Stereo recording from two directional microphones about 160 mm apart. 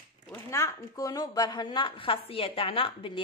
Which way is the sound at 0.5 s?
20° left (ahead or behind).